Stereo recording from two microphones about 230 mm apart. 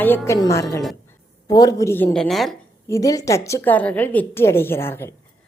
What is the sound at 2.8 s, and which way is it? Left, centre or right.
A woman's voice, centre.